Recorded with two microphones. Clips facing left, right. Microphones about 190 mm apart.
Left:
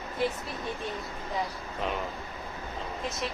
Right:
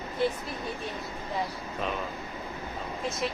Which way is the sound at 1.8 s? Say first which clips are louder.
Even; 20° left (ahead or behind).